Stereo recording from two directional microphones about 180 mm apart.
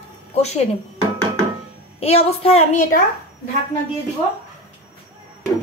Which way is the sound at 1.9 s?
35° left (ahead or behind).